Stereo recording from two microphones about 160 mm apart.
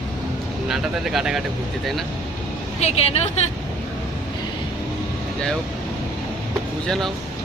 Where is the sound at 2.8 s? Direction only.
40° left (ahead or behind).